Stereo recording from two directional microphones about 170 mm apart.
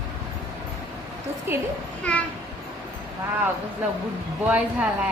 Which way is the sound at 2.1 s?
10° left (ahead or behind).